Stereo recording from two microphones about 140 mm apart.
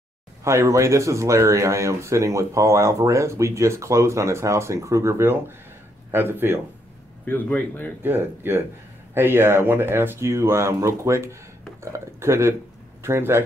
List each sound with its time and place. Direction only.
0.4 s speech: 20° right (ahead or behind)
7.2 s speech: 10° left (ahead or behind)
8.0 s speech: 15° right (ahead or behind)